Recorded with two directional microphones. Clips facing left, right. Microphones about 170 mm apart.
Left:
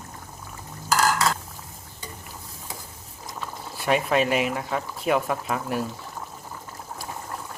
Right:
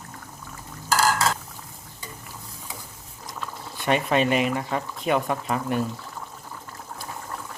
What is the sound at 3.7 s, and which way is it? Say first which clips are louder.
Speech: even; 5° left (ahead or behind).